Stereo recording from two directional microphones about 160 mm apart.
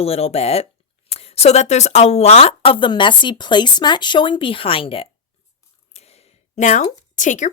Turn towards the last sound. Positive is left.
turn(degrees=50)  # may be behind; listen again after turning